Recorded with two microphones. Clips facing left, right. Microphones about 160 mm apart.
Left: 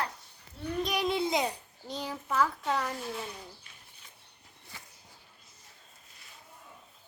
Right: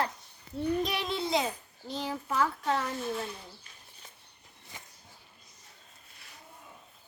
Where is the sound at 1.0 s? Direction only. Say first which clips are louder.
Left 2 dB; centre (ahead or behind).